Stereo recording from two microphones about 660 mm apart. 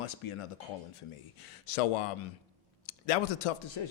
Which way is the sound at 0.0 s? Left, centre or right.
Left.